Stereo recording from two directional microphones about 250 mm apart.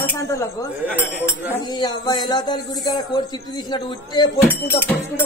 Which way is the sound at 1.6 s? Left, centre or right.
Centre.